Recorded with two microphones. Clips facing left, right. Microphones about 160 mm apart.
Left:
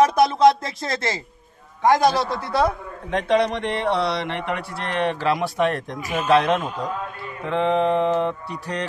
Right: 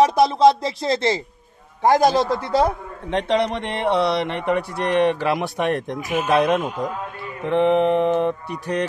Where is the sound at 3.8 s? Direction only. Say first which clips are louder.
Right 5 dB; 20° right (ahead or behind).